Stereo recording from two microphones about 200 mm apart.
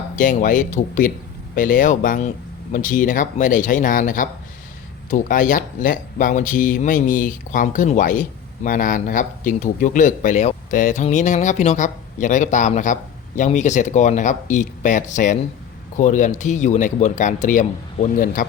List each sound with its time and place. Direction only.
0.2 s speech: 40° left (ahead or behind)